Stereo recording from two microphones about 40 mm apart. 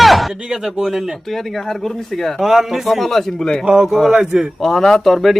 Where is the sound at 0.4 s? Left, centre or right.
Centre.